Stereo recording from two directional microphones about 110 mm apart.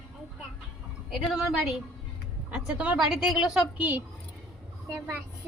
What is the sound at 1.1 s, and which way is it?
A woman's voice, 5° right (ahead or behind).